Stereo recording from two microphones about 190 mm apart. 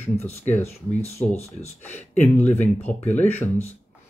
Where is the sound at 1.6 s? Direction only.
10° left (ahead or behind).